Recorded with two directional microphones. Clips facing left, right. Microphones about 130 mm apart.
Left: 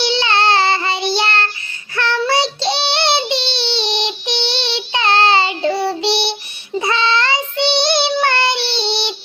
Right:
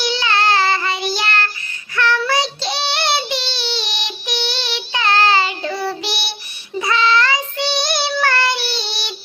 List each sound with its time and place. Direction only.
0.0 s child singing: 25° left (ahead or behind)